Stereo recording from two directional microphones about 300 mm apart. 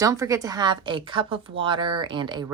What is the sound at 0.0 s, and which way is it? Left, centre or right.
A woman's voice, centre.